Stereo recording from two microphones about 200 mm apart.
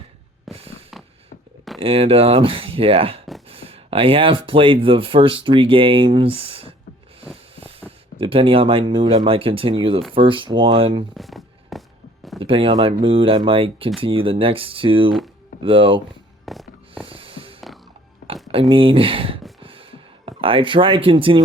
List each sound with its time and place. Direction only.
0.5 s fireworks: centre (ahead or behind)
1.8 s speech: 30° right (ahead or behind)
7.5 s creak: 30° right (ahead or behind)
8.2 s speech: 25° right (ahead or behind)
11.1 s a sound: centre (ahead or behind)
12.4 s speech: 25° right (ahead or behind)
16.5 s music: 5° right (ahead or behind)
17.1 s music: 25° right (ahead or behind)
18.7 s speech: 25° right (ahead or behind)
19.6 s a sound: 25° right (ahead or behind)